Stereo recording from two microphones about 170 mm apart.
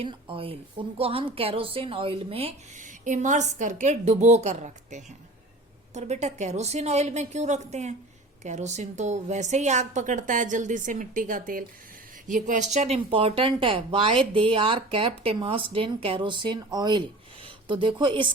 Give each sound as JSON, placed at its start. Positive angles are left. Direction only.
{"t": 0.0, "sound": "a woman's voice", "side_deg": -30}